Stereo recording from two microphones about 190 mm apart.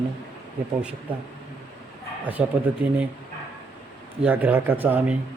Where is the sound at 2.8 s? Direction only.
10° right (ahead or behind).